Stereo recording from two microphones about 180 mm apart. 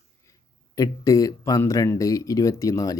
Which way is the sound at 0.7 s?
20° left (ahead or behind).